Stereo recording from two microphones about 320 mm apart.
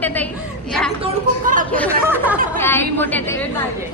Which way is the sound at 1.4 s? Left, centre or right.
Right.